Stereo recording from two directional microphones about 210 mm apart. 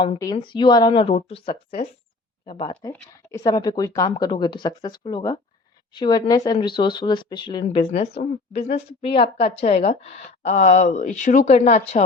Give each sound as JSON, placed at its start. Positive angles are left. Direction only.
{"t": 0.0, "sound": "speech", "side_deg": 20}